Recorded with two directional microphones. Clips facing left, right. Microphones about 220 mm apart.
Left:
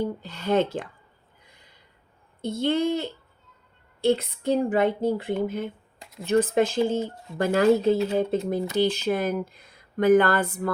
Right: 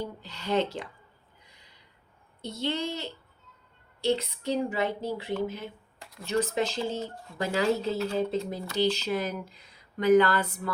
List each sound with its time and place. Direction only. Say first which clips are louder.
0.0 s speech: left 7 dB; 50° left (ahead or behind)
1.5 s a sound: left 3 dB; 50° left (ahead or behind)
2.4 s speech: left 8 dB; 50° left (ahead or behind)
7.9 s speech: left 5 dB; 20° left (ahead or behind)
8.3 s speech: left 6 dB; 55° left (ahead or behind)